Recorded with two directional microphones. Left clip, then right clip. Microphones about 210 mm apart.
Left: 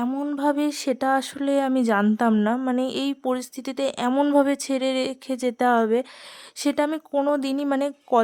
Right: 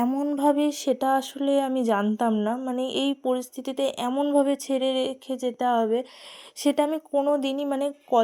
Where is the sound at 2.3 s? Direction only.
25° left (ahead or behind).